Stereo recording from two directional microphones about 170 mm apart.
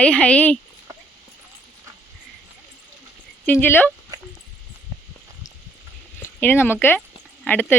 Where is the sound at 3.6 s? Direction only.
10° left (ahead or behind).